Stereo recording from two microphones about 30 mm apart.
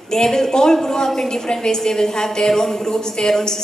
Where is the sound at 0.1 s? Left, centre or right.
Centre.